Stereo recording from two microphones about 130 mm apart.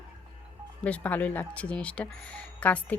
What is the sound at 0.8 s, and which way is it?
Speech, 10° left (ahead or behind).